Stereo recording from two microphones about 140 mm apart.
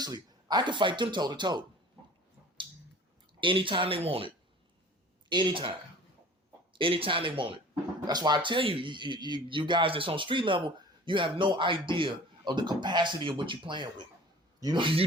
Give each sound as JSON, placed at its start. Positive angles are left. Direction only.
{"t": 0.0, "sound": "speech", "side_deg": -30}
{"t": 3.4, "sound": "speech", "side_deg": -40}
{"t": 5.3, "sound": "speech", "side_deg": -35}
{"t": 6.7, "sound": "speech", "side_deg": -40}